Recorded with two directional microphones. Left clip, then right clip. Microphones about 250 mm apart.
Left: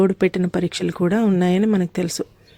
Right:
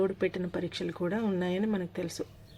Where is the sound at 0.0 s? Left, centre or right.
Left.